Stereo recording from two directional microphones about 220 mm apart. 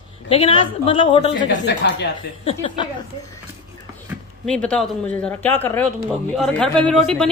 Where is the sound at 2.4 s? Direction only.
25° left (ahead or behind).